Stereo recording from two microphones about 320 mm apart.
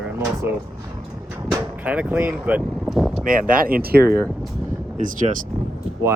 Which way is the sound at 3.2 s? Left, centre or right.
Right.